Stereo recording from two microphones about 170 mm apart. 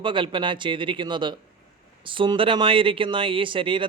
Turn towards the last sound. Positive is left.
turn(degrees=-30)  # may be behind; listen again after turning